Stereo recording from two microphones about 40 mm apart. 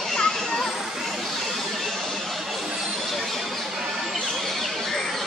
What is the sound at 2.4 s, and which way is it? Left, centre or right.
Vehicle, centre.